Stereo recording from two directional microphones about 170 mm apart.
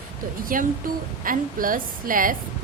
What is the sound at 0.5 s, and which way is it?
Speech, 55° right (ahead or behind).